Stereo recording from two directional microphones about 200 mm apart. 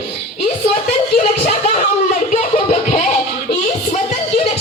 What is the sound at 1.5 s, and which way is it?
Speech, 35° left (ahead or behind).